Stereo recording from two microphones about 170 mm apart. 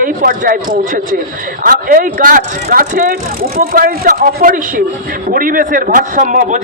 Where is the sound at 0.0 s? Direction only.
55° right (ahead or behind).